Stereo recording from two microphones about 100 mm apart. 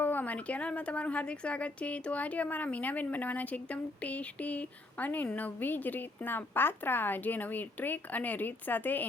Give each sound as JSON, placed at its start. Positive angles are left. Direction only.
{"t": 0.0, "sound": "a woman's voice", "side_deg": 20}